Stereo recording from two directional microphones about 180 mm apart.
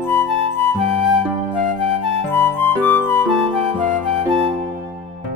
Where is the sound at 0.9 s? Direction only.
25° right (ahead or behind).